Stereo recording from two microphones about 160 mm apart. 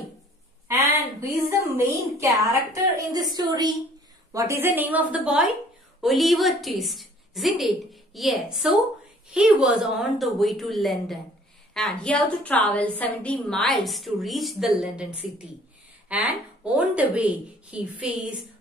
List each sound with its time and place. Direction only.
1.3 s a woman's voice: 15° right (ahead or behind)